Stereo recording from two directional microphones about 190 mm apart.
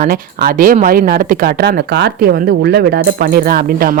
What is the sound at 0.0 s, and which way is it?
Speech, 50° right (ahead or behind).